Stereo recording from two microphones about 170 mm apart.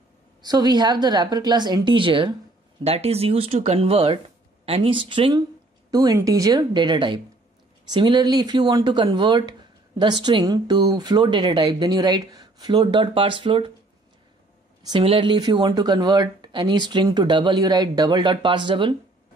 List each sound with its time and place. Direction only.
0.4 s speech: 25° right (ahead or behind)
14.8 s speech: 30° right (ahead or behind)